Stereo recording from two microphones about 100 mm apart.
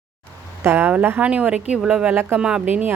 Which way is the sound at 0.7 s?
15° right (ahead or behind).